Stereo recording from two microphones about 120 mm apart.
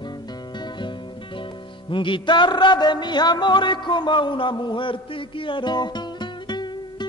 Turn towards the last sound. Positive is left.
turn(degrees=35)  # may be behind; listen again after turning